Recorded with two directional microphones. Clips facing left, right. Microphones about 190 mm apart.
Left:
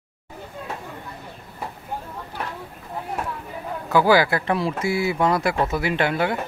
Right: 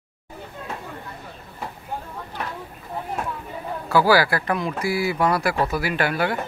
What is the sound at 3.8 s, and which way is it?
Speech, 20° left (ahead or behind).